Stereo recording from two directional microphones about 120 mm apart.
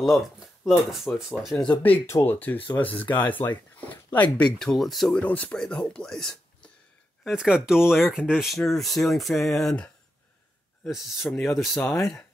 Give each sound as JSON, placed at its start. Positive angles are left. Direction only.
{"t": 0.7, "sound": "speech", "side_deg": -5}
{"t": 1.7, "sound": "speech", "side_deg": 15}
{"t": 2.0, "sound": "speech", "side_deg": 25}
{"t": 2.3, "sound": "speech", "side_deg": 15}
{"t": 5.2, "sound": "speech", "side_deg": 15}
{"t": 7.2, "sound": "speech", "side_deg": -5}
{"t": 10.9, "sound": "speech", "side_deg": -5}
{"t": 11.8, "sound": "speech", "side_deg": 25}